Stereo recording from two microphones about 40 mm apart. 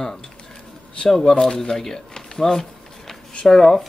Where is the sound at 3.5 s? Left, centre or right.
Centre.